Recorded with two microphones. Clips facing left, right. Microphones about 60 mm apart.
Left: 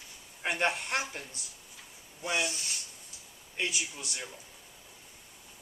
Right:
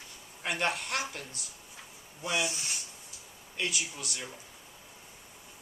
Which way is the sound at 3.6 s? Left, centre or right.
Left.